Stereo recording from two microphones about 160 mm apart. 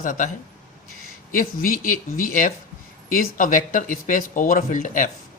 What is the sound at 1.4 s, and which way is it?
Speech, 60° left (ahead or behind).